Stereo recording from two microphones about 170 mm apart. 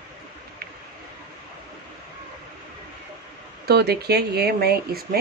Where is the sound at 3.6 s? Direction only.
70° right (ahead or behind).